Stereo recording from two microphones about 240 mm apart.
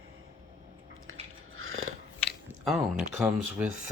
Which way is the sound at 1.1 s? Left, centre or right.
Right.